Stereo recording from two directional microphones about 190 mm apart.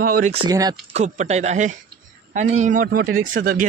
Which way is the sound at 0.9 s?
40° right (ahead or behind).